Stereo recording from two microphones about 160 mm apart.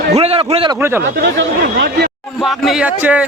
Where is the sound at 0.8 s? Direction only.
15° right (ahead or behind).